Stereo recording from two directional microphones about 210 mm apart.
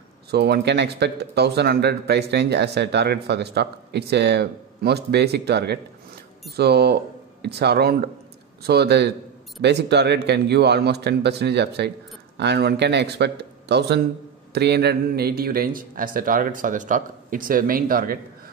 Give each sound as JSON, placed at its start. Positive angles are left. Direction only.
{"t": 0.3, "sound": "speech", "side_deg": -50}